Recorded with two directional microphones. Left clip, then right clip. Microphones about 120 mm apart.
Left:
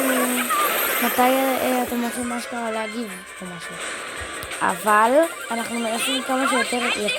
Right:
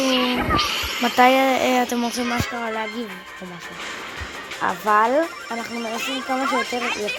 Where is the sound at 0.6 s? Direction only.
5° left (ahead or behind).